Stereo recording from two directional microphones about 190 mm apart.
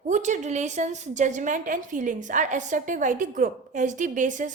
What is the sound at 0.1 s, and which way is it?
A woman's voice, 40° right (ahead or behind).